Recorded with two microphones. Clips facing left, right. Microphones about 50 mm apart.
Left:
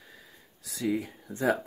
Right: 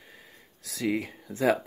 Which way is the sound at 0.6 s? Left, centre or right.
Right.